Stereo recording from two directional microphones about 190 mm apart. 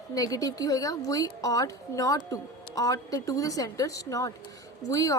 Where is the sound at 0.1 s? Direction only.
20° left (ahead or behind).